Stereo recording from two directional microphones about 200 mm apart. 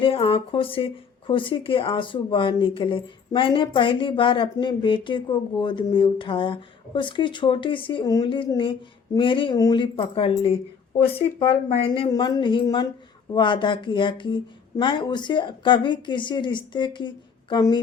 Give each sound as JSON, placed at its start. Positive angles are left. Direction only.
{"t": 0.0, "sound": "speech", "side_deg": 30}